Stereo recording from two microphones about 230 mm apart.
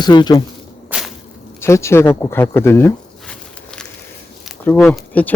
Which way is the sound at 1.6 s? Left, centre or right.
Centre.